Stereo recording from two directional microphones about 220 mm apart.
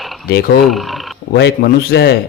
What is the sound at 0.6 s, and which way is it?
Speech, centre (ahead or behind).